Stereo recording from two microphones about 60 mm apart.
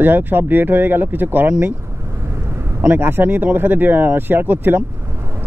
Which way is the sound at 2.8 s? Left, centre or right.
Right.